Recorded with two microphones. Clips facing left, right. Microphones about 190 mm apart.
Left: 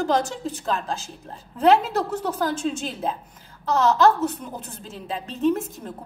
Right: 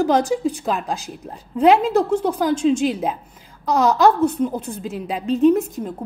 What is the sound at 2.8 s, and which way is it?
A woman's voice, 15° right (ahead or behind).